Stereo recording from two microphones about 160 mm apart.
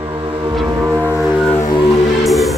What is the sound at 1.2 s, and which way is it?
Music, centre (ahead or behind).